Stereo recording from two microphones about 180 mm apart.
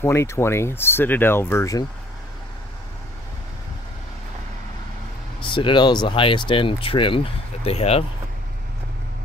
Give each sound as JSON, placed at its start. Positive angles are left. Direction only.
{"t": 0.0, "sound": "speech", "side_deg": 15}
{"t": 5.4, "sound": "speech", "side_deg": 25}